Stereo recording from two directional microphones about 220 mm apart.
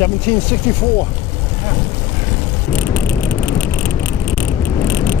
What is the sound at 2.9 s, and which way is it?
Vehicle, 10° left (ahead or behind).